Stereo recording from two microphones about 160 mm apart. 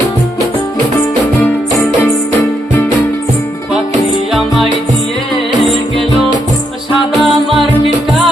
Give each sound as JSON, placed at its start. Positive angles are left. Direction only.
{"t": 4.3, "sound": "music", "side_deg": 0}
{"t": 7.2, "sound": "music", "side_deg": 0}